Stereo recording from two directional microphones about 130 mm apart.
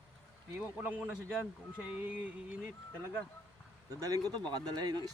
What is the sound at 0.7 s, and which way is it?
Speech, 10° right (ahead or behind).